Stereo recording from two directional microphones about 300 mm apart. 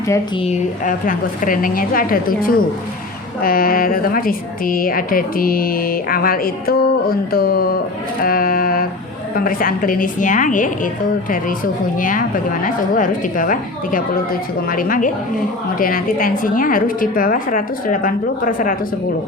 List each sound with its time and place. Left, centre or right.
0.1 s a woman's voice: centre
8.2 s a sound: left
9.3 s a woman's voice: left